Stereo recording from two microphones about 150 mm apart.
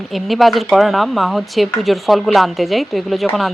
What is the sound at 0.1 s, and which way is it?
Speech, centre (ahead or behind).